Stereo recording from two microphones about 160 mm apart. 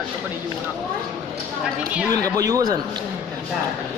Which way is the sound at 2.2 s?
20° right (ahead or behind).